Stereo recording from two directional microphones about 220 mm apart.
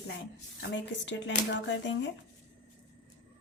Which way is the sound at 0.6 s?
55° left (ahead or behind).